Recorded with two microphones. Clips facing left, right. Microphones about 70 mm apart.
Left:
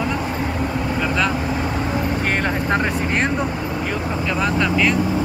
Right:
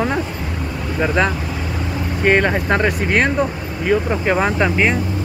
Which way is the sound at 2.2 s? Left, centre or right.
Right.